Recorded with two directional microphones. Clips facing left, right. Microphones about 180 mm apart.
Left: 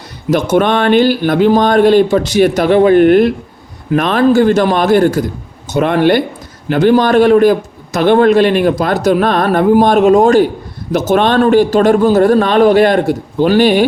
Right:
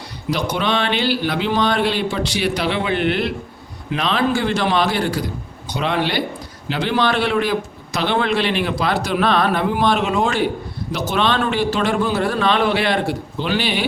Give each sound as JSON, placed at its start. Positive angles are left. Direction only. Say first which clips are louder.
{"t": 0.5, "sound": "speech", "louder": "left 12 dB", "side_deg": 50}